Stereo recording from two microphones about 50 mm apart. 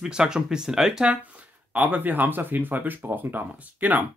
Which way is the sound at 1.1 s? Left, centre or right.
Right.